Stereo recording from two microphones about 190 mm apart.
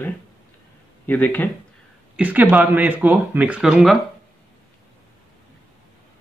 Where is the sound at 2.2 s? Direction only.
10° right (ahead or behind).